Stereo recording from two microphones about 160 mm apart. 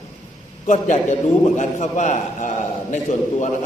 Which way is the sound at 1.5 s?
50° left (ahead or behind).